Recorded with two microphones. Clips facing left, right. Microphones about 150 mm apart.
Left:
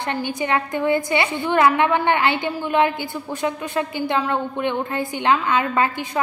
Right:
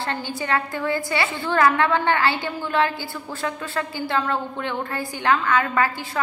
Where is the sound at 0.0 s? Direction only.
20° left (ahead or behind).